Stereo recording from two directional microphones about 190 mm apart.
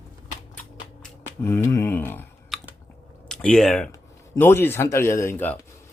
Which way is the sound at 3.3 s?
5° left (ahead or behind).